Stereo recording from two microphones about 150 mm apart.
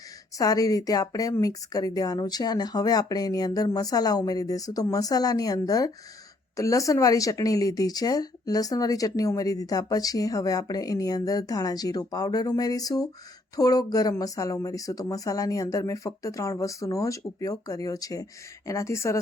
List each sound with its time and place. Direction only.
0.3 s speech: 25° left (ahead or behind)